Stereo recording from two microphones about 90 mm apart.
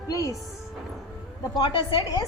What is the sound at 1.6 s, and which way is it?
Speech, 65° left (ahead or behind).